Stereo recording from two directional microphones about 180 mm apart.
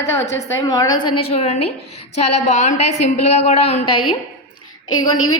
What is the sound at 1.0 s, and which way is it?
A woman's voice, 35° left (ahead or behind).